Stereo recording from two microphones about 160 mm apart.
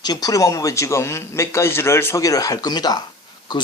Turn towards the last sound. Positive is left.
turn(degrees=25)  # may be behind; listen again after turning